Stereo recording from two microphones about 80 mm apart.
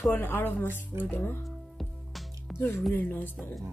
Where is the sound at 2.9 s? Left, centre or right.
Left.